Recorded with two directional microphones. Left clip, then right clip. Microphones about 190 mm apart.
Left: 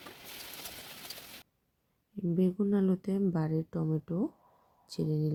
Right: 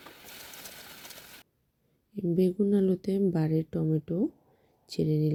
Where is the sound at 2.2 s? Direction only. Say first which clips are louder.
Right 5 dB; 25° right (ahead or behind).